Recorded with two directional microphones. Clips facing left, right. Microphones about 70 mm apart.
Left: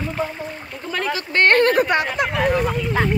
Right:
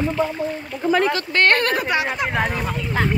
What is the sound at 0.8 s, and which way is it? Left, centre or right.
Speech, centre.